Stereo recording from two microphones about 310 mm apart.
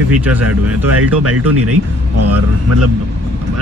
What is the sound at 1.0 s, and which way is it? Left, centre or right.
A man's voice, right.